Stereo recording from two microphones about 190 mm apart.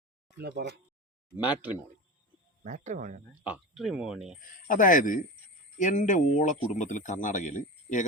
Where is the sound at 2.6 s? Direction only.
40° right (ahead or behind).